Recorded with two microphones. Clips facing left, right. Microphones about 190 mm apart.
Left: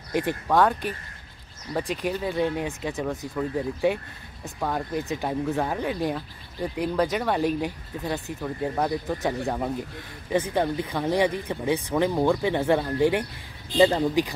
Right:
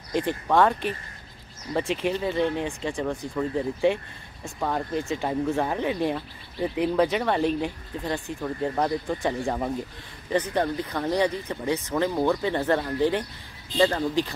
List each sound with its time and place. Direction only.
0.1 s speech: 10° left (ahead or behind)